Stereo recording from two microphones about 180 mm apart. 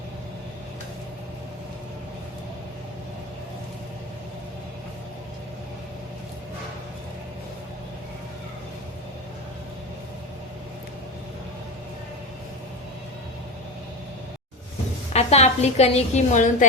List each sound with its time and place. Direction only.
15.1 s a woman's voice: 35° left (ahead or behind)